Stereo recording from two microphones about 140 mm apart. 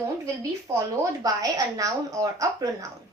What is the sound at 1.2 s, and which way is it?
A woman's voice, 25° right (ahead or behind).